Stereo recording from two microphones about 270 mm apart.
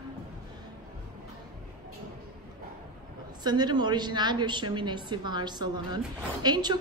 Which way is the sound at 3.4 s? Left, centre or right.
Centre.